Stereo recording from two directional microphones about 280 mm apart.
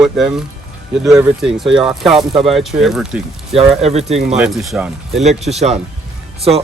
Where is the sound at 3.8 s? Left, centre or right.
Right.